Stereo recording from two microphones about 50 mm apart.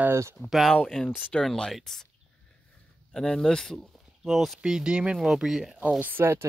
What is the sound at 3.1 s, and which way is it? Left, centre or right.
Speech, centre.